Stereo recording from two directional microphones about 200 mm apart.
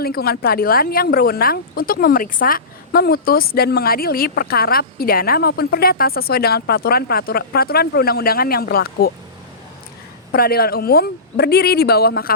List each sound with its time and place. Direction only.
0.0 s a woman's voice: 50° left (ahead or behind)
10.3 s a woman's voice: 50° left (ahead or behind)